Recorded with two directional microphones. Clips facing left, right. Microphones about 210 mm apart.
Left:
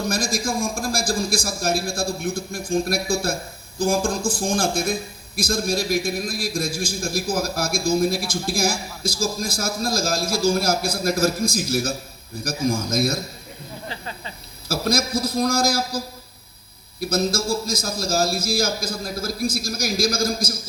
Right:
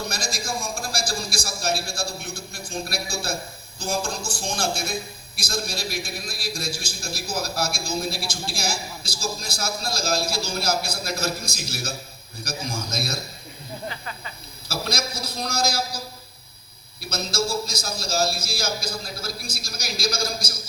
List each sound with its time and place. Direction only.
0.1 s a man's voice: 50° left (ahead or behind)
13.8 s snake: 30° left (ahead or behind)
14.7 s a man's voice: 50° left (ahead or behind)
17.0 s a man's voice: 50° left (ahead or behind)